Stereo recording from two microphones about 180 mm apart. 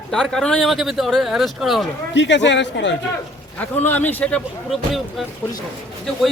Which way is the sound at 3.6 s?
10° left (ahead or behind).